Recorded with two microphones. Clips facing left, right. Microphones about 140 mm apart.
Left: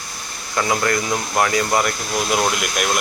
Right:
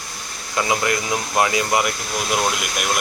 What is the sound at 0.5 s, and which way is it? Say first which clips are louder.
Speech: left 1 dB; 15° right (ahead or behind).